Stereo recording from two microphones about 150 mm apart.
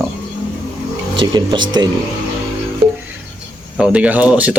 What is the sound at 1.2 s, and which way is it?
Speech, 30° right (ahead or behind).